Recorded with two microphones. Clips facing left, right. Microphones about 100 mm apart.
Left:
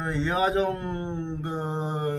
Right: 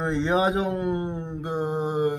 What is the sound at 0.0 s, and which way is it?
Mantra, 20° right (ahead or behind).